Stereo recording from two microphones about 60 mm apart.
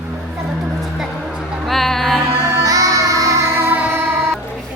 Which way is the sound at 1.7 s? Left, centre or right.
Centre.